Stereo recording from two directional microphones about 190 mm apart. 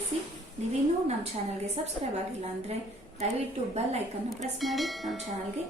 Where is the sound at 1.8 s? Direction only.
30° right (ahead or behind).